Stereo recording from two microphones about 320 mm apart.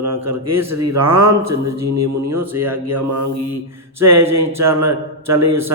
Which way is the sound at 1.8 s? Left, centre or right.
Right.